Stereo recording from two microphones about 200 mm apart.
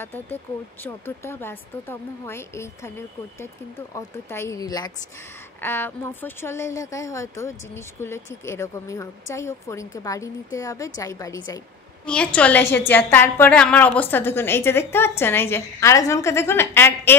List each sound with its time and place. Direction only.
0.0 s speech: 10° left (ahead or behind)
3.9 s speech: 15° left (ahead or behind)
12.1 s speech: 5° left (ahead or behind)